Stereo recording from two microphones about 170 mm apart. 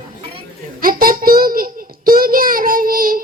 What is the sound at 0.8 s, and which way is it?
Child singing, 55° right (ahead or behind).